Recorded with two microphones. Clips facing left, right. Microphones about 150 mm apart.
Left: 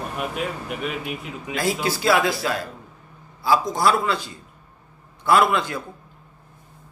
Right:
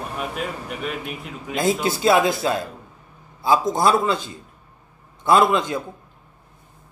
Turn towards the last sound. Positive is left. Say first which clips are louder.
# right 2 dB
turn(degrees=-20)  # may be behind; listen again after turning